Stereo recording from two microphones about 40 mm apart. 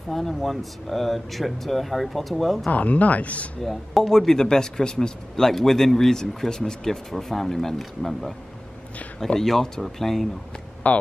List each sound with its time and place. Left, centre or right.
0.1 s speech: centre
2.7 s speech: left
3.6 s speech: centre
10.8 s speech: left